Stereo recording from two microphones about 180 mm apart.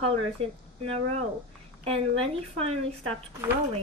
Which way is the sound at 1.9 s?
35° right (ahead or behind).